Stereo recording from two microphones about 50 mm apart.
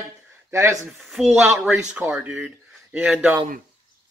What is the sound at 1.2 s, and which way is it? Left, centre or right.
Speech, centre.